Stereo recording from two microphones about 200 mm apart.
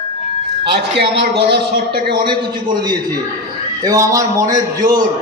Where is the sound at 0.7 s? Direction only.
60° right (ahead or behind).